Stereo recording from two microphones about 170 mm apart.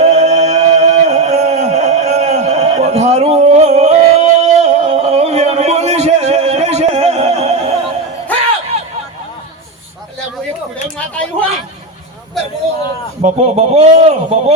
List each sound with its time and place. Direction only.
0.0 s music: 40° right (ahead or behind)
10.9 s a sound: 10° left (ahead or behind)
13.2 s a man's voice: 40° right (ahead or behind)